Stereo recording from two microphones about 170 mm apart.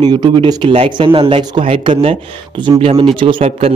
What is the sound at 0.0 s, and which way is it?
Speech, 25° right (ahead or behind).